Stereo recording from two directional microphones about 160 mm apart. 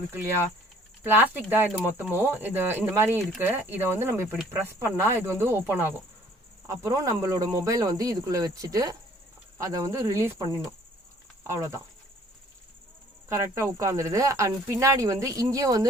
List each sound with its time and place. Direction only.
0.1 s speech: 15° right (ahead or behind)
11.4 s speech: 20° right (ahead or behind)
13.2 s speech: 20° right (ahead or behind)